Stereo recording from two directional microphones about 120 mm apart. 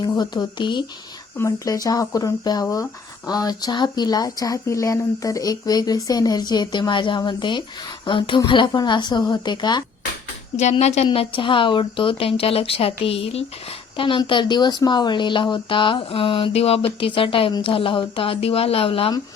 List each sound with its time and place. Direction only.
0.0 s speech: 35° left (ahead or behind)
1.4 s a woman's voice: 25° left (ahead or behind)
10.6 s a woman's voice: 65° left (ahead or behind); by 19.1 s 50° left (ahead or behind)